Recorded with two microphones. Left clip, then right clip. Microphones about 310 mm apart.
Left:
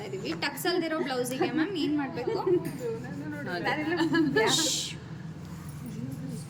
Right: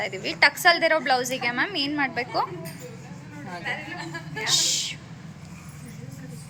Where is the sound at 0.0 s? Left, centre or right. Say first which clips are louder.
Right 12 dB; centre.